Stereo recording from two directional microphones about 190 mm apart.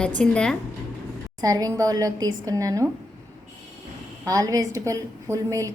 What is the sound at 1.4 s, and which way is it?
A woman's voice, 20° right (ahead or behind).